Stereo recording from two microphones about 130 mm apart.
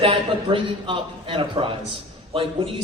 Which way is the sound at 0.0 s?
45° right (ahead or behind).